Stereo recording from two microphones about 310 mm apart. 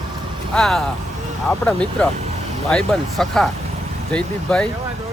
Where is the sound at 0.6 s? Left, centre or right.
Centre.